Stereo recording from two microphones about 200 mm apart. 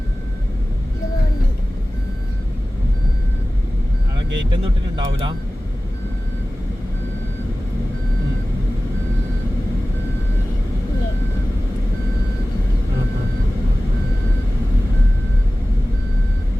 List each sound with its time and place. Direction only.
4.5 s speech: 25° right (ahead or behind)